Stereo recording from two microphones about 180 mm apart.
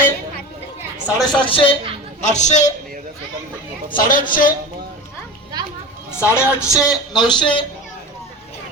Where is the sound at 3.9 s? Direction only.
50° left (ahead or behind).